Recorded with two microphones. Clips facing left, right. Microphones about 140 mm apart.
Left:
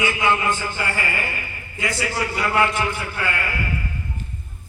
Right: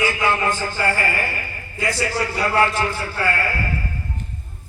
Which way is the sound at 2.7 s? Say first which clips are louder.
Right 1 dB; 20° left (ahead or behind).